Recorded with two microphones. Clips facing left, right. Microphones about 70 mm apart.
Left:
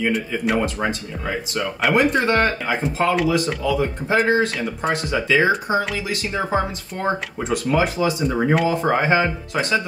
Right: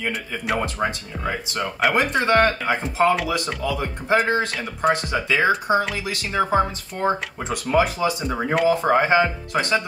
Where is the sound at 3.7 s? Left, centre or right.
Right.